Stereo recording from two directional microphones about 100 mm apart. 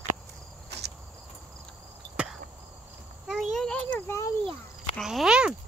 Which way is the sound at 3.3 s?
Centre (ahead or behind).